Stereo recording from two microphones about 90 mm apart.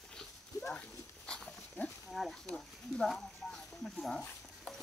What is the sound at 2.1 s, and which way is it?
Speech, centre (ahead or behind).